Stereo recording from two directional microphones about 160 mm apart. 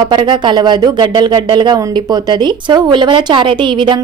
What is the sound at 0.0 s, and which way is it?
A woman's voice, 30° right (ahead or behind).